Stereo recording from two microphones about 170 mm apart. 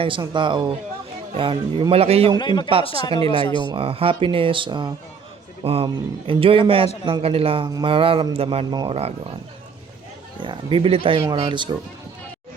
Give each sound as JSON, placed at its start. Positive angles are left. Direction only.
{"t": 0.0, "sound": "speech", "side_deg": -30}
{"t": 2.4, "sound": "speech", "side_deg": 25}
{"t": 3.7, "sound": "speech", "side_deg": -35}
{"t": 10.3, "sound": "speech", "side_deg": -30}